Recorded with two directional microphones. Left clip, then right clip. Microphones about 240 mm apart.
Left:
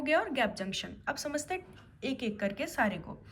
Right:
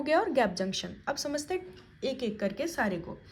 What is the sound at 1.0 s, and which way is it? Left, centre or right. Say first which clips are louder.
A woman's voice: right 2 dB; centre.